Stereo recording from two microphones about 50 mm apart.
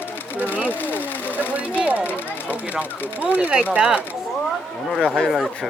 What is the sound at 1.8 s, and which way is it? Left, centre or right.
Speech, right.